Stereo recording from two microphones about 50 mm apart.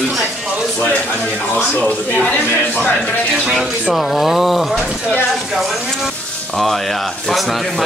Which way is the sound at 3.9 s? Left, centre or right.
Centre.